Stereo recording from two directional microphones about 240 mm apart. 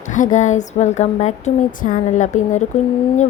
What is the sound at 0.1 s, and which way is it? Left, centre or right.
Speech, left.